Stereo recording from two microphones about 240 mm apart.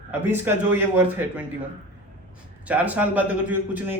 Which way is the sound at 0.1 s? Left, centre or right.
Centre.